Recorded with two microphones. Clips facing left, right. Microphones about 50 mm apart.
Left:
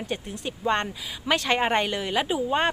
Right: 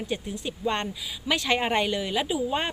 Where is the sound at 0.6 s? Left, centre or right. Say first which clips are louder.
Left 3 dB; left.